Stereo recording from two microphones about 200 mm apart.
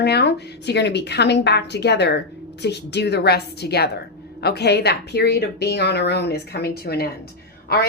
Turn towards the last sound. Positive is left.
turn(degrees=50)  # may be behind; listen again after turning